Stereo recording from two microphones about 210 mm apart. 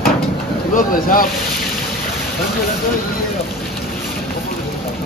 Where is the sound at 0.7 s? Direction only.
40° left (ahead or behind).